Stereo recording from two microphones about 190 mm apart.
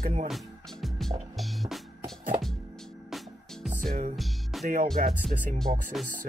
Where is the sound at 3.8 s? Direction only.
40° right (ahead or behind).